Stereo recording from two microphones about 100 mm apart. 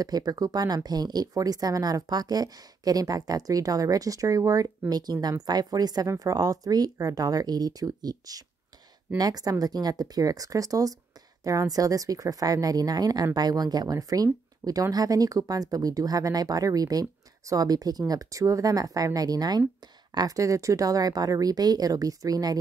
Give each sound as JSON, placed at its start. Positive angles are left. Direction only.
{"t": 0.0, "sound": "speech", "side_deg": -40}